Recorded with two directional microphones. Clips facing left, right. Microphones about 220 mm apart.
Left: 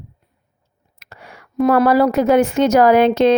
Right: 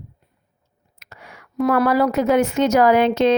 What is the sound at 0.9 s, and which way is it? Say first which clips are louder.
Whispering: left 2 dB; 30° left (ahead or behind).